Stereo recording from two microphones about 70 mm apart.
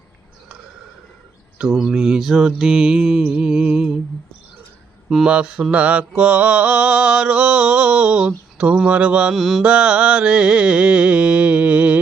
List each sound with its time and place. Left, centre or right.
1.5 s mantra: centre
5.0 s mantra: centre
9.3 s mantra: centre
9.6 s mantra: centre